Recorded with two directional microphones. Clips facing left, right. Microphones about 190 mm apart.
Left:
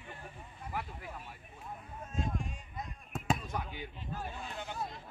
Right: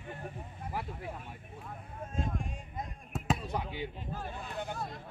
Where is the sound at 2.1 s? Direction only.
50° right (ahead or behind).